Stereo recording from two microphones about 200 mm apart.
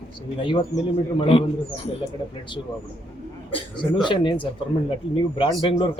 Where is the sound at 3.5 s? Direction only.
25° left (ahead or behind).